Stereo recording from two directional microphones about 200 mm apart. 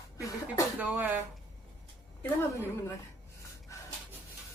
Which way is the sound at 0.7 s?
10° right (ahead or behind).